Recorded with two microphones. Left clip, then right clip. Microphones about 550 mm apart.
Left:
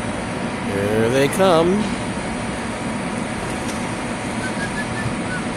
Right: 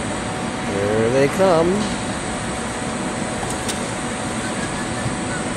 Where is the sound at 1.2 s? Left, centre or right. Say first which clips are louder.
Even; left.